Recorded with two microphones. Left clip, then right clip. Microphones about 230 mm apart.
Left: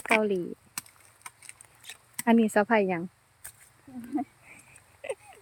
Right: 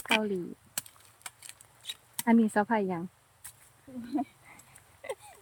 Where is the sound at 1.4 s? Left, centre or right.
Centre.